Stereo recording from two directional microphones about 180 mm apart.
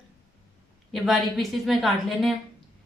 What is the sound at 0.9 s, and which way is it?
A woman's voice, centre (ahead or behind).